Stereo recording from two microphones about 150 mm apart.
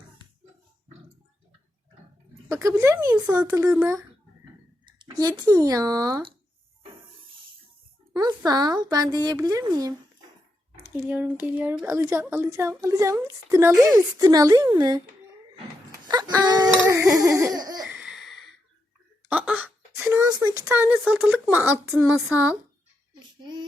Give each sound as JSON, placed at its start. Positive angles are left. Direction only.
{"t": 2.5, "sound": "speech", "side_deg": -20}
{"t": 3.2, "sound": "speech", "side_deg": -10}
{"t": 5.4, "sound": "speech", "side_deg": -25}
{"t": 8.1, "sound": "a sound", "side_deg": -25}
{"t": 8.4, "sound": "speech", "side_deg": -25}
{"t": 15.9, "sound": "a sound", "side_deg": -25}
{"t": 17.2, "sound": "speech", "side_deg": -20}
{"t": 17.7, "sound": "laughter", "side_deg": -5}
{"t": 19.3, "sound": "a sound", "side_deg": -10}
{"t": 20.4, "sound": "speech", "side_deg": -15}